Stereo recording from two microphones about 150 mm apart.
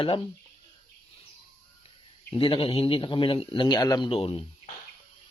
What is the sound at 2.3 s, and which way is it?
Speech, 35° left (ahead or behind).